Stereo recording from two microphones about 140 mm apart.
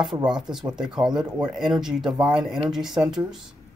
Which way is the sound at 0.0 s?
5° right (ahead or behind).